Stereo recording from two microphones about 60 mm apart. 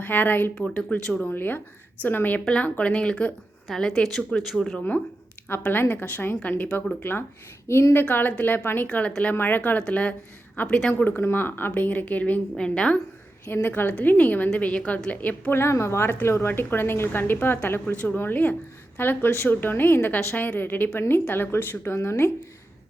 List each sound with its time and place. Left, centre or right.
0.0 s a woman's voice: left
0.5 s a woman's voice: centre
1.2 s a woman's voice: left; by 4.8 s centre
5.5 s a woman's voice: left
7.7 s a woman's voice: left
7.9 s a woman's voice: left
8.9 s a woman's voice: left
9.3 s a woman's voice: left
9.6 s a woman's voice: left
11.2 s a woman's voice: left
12.5 s a woman's voice: centre
13.4 s a woman's voice: left
15.5 s a woman's voice: left